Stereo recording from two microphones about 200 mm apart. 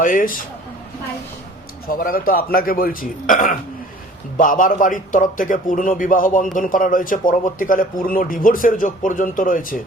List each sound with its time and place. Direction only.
0.0 s a man's voice: 45° left (ahead or behind)
1.9 s a man's voice: 45° left (ahead or behind)